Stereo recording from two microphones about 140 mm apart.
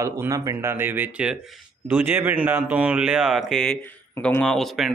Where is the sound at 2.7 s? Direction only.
10° right (ahead or behind).